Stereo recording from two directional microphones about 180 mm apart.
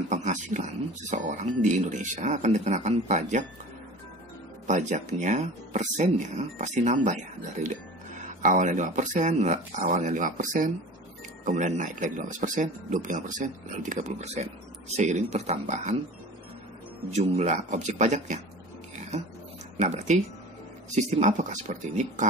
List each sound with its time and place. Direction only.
0.1 s speech: 45° right (ahead or behind)
4.6 s speech: 40° right (ahead or behind)
17.1 s speech: 40° right (ahead or behind)
18.9 s dog: 40° right (ahead or behind)
19.8 s speech: 40° right (ahead or behind)